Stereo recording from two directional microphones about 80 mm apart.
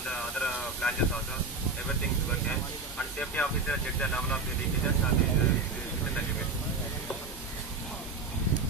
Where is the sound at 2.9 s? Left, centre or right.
Centre.